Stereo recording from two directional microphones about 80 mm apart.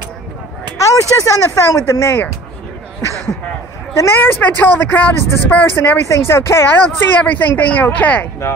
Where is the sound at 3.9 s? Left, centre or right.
Left.